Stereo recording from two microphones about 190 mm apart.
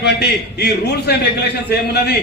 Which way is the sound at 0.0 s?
60° left (ahead or behind).